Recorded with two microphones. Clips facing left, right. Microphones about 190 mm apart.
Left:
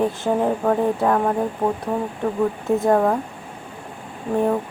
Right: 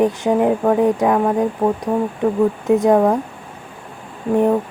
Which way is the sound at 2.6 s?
15° right (ahead or behind).